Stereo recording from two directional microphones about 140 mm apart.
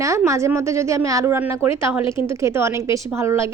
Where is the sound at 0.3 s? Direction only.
20° right (ahead or behind).